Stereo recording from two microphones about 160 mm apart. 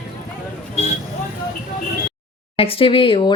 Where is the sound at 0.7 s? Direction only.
45° left (ahead or behind).